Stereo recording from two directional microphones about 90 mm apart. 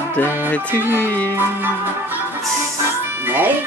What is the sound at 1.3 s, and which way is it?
Speech, 25° right (ahead or behind).